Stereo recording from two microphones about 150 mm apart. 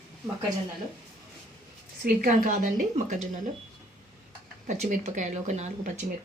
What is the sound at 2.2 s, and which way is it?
Speech, 60° right (ahead or behind).